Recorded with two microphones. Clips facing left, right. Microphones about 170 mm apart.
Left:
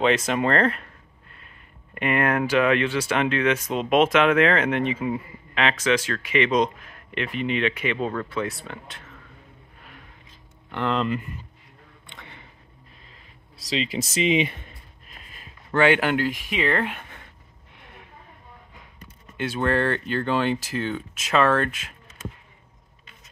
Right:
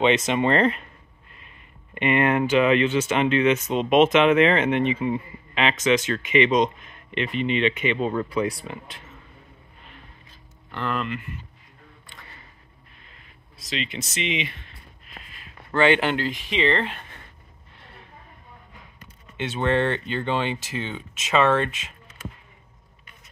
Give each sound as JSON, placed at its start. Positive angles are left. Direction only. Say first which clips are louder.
{"t": 0.3, "sound": "speech", "louder": "right 1 dB", "side_deg": 0}
{"t": 2.0, "sound": "speech", "louder": "right 2 dB", "side_deg": 0}
{"t": 8.1, "sound": "speech", "louder": "right 3 dB", "side_deg": -10}
{"t": 8.5, "sound": "speech", "louder": "right 3 dB", "side_deg": 0}
{"t": 10.7, "sound": "speech", "louder": "left 3 dB", "side_deg": 20}
{"t": 13.6, "sound": "speech", "louder": "left 4 dB", "side_deg": 35}
{"t": 15.7, "sound": "speech", "louder": "even", "side_deg": 10}
{"t": 17.7, "sound": "a sound", "louder": "left 1 dB", "side_deg": 15}
{"t": 19.3, "sound": "speech", "louder": "right 1 dB", "side_deg": 0}